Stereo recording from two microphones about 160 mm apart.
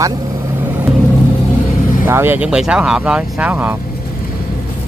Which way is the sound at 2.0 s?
15° right (ahead or behind).